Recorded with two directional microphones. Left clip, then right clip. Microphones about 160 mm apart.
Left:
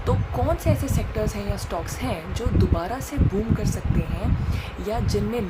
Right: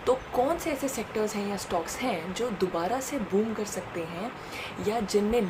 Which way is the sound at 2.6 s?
10° left (ahead or behind).